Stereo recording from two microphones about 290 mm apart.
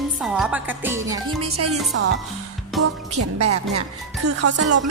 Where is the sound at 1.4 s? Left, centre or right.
Right.